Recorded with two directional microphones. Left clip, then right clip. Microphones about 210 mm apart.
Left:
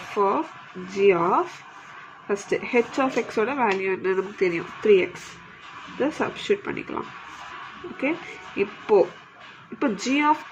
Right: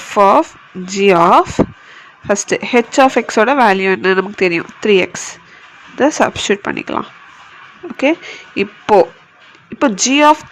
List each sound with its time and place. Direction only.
0.1 s speech: 50° right (ahead or behind)
8.5 s speech: 50° right (ahead or behind)